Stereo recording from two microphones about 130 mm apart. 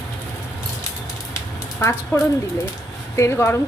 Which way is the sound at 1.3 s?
20° left (ahead or behind).